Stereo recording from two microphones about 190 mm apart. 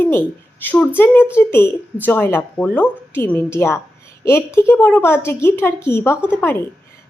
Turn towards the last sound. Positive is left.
turn(degrees=10)  # may be behind; listen again after turning